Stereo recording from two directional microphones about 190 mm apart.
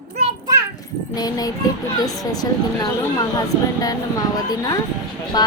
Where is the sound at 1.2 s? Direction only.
20° left (ahead or behind).